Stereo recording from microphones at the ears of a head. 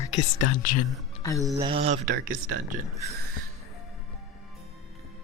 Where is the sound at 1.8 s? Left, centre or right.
Right.